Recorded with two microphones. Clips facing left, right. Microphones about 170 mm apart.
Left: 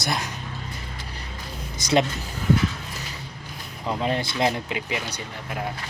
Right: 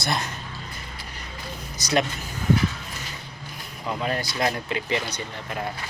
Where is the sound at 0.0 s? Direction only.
15° left (ahead or behind).